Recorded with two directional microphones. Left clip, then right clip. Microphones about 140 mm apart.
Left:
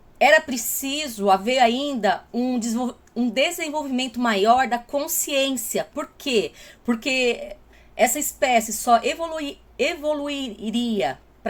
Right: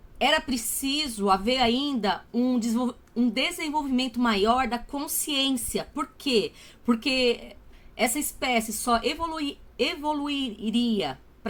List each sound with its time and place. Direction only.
0.2 s a woman's voice: 25° right (ahead or behind)